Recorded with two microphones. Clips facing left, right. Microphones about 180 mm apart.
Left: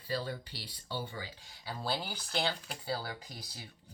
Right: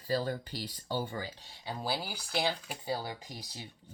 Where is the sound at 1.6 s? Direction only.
20° right (ahead or behind).